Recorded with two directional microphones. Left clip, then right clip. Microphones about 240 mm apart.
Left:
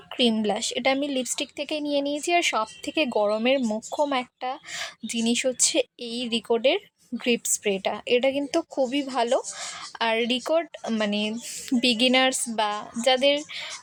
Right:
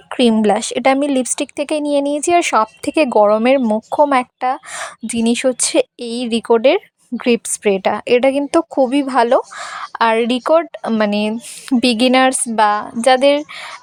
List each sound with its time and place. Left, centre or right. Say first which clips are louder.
0.1 s a woman's voice: right 10 dB; right